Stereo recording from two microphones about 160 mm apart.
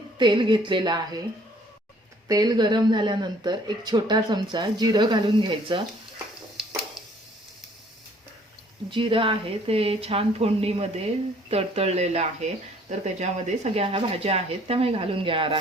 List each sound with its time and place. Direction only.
0.2 s speech: 30° right (ahead or behind)
2.2 s speech: 25° right (ahead or behind)
8.9 s speech: 30° right (ahead or behind)